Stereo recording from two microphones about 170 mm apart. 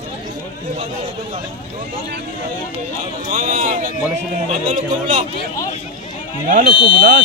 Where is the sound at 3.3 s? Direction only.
45° right (ahead or behind).